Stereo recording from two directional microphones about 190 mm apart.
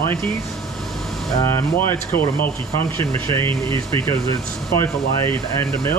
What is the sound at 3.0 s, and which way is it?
Speech, 30° right (ahead or behind).